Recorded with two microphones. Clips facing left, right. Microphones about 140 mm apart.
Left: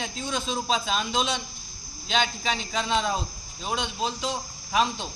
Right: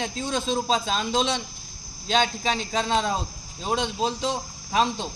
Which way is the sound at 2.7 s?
30° right (ahead or behind).